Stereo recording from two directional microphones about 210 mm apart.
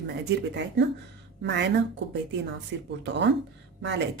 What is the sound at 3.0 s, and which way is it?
Speech, 55° right (ahead or behind).